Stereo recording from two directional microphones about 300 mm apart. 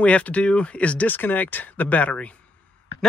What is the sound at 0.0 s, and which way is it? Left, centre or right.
Speech, centre.